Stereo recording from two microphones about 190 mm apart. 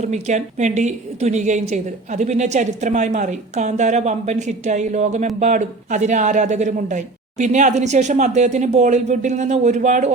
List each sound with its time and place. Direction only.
0.0 s a woman's voice: 40° right (ahead or behind)